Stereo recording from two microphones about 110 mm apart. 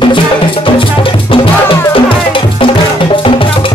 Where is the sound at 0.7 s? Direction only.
50° left (ahead or behind).